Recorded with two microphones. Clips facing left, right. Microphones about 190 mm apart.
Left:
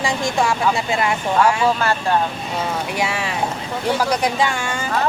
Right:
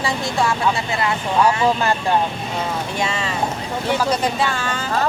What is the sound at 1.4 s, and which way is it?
Speech, 15° right (ahead or behind).